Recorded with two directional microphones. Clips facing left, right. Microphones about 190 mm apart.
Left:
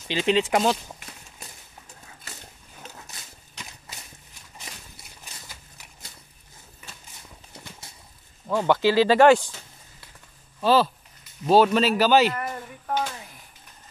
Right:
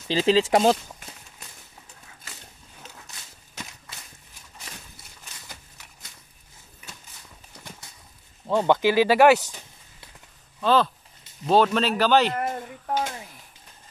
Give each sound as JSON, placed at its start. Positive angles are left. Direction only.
{"t": 0.1, "sound": "speech", "side_deg": -35}
{"t": 8.5, "sound": "speech", "side_deg": -20}
{"t": 10.6, "sound": "speech", "side_deg": 10}